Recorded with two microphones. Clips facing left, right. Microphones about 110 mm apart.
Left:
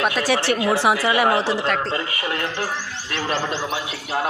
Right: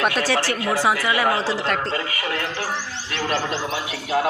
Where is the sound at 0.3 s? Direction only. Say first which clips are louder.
Left 3 dB; 20° left (ahead or behind).